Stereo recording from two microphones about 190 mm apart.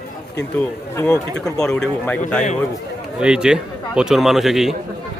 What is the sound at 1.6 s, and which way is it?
Speech, 5° left (ahead or behind).